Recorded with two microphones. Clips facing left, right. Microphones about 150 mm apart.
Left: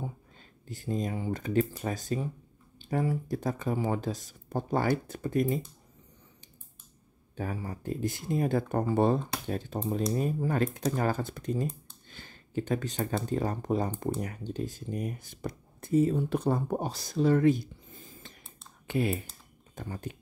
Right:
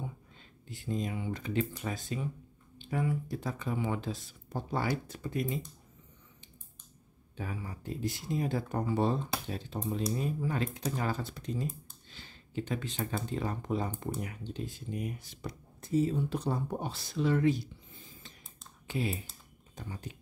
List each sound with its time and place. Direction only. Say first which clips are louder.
0.7 s speech: left 3 dB; 40° left (ahead or behind)
7.3 s speech: left 5 dB; 45° left (ahead or behind)
18.9 s speech: left 5 dB; 60° left (ahead or behind)